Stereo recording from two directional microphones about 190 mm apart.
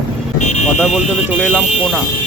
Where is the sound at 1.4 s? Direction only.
5° right (ahead or behind).